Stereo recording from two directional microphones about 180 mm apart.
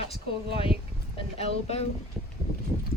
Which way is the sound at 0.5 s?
30° left (ahead or behind).